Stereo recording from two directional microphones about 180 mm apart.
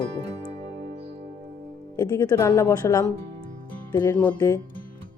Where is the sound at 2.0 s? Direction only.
20° left (ahead or behind).